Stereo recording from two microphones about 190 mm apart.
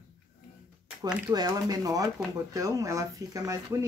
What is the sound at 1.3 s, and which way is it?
Speech, 20° right (ahead or behind).